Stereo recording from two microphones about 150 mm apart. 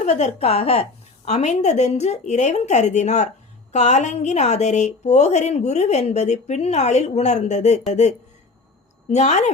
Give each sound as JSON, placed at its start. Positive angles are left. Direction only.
{"t": 0.0, "sound": "a woman's voice", "side_deg": 50}